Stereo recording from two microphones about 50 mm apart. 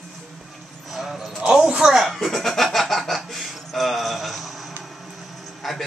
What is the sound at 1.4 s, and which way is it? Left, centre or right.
Speech, centre.